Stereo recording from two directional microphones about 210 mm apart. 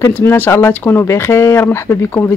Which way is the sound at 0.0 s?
10° left (ahead or behind).